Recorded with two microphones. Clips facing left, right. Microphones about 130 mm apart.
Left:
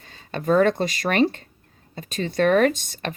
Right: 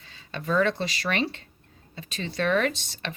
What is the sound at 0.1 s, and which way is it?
Speech, 45° left (ahead or behind).